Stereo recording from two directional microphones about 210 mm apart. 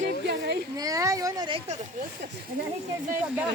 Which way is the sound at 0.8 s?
15° right (ahead or behind).